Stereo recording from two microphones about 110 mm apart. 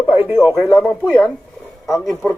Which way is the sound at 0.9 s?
20° left (ahead or behind).